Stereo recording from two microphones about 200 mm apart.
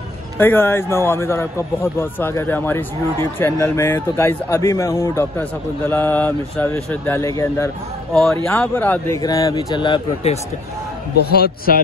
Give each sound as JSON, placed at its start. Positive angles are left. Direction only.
{"t": 0.4, "sound": "a man's voice", "side_deg": 10}
{"t": 8.1, "sound": "a man's voice", "side_deg": 0}
{"t": 11.2, "sound": "a man's voice", "side_deg": 50}